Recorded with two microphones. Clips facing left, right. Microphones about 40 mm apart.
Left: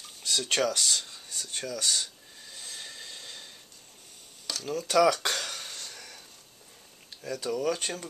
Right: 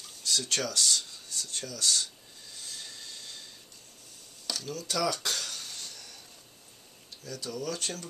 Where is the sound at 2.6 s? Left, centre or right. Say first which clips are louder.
Left 2 dB; left.